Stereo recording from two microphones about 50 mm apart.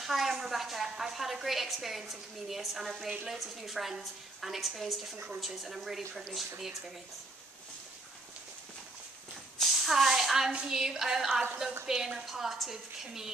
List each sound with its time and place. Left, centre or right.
0.0 s a woman's voice: centre
5.1 s a woman's voice: right
5.4 s a woman's voice: centre
9.6 s a sound: centre
10.7 s a woman's voice: centre